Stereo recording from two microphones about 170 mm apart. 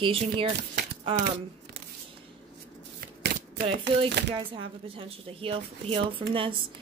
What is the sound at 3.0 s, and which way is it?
Shuffling cards, 70° right (ahead or behind).